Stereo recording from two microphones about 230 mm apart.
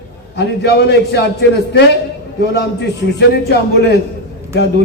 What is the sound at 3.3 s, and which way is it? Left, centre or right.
Speech, left.